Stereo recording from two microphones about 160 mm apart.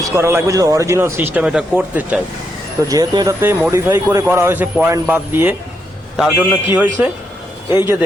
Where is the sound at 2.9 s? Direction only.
20° right (ahead or behind); by 6.5 s 5° right (ahead or behind).